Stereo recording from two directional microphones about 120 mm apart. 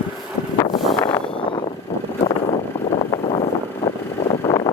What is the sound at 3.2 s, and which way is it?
Vehicle, 55° left (ahead or behind).